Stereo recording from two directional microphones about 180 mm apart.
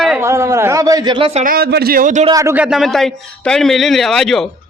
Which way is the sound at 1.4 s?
55° right (ahead or behind).